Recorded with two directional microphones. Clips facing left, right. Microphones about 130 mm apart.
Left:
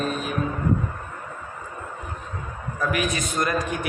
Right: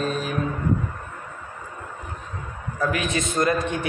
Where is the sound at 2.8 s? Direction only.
25° right (ahead or behind).